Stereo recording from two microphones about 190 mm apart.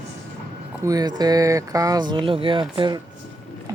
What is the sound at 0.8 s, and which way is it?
Speech, 20° right (ahead or behind).